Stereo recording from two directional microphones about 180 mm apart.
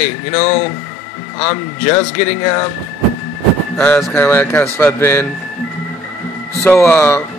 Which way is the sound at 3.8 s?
10° left (ahead or behind).